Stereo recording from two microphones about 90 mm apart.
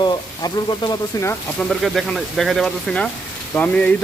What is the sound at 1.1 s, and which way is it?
Speech, 40° left (ahead or behind).